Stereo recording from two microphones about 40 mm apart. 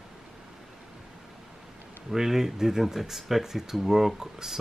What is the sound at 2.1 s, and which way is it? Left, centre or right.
Speech, centre.